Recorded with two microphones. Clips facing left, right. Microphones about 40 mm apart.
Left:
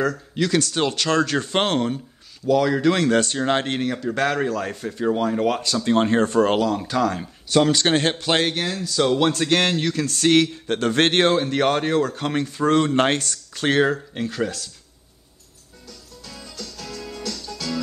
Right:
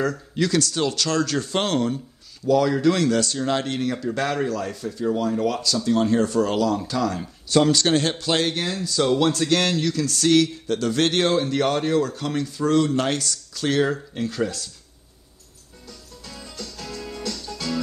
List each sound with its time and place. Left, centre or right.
0.0 s speech: centre
0.5 s speech: centre
2.4 s speech: centre; by 3.8 s left
3.8 s speech: centre
4.6 s speech: left
7.5 s speech: centre
7.8 s speech: left
8.6 s speech: centre; by 13.9 s left
14.1 s speech: centre
16.3 s music: centre